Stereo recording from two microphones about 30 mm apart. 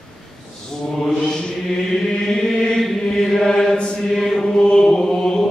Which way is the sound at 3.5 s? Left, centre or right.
Left.